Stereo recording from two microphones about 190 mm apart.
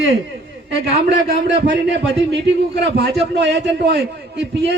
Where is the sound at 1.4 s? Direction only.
65° right (ahead or behind).